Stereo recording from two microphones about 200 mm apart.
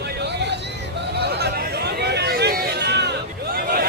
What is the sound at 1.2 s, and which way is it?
Chatter, 55° right (ahead or behind).